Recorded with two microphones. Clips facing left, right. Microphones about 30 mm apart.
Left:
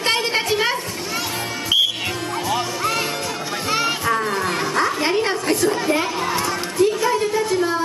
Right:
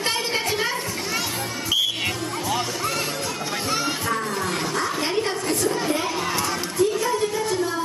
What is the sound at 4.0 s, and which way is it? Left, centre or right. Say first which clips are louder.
Children playing: left 5 dB; left.